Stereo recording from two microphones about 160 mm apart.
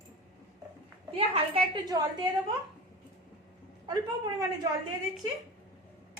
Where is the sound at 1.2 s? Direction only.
35° right (ahead or behind).